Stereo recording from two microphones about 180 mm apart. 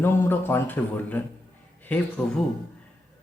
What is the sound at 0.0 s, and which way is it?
Speech, 10° left (ahead or behind).